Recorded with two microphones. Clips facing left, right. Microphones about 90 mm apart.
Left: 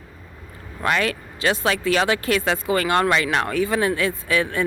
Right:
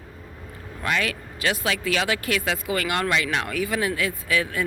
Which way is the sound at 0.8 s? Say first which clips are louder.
Left 4 dB; 40° left (ahead or behind).